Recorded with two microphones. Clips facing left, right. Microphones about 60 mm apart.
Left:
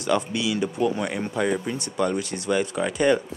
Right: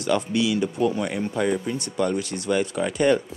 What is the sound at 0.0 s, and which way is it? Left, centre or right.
Speech, centre.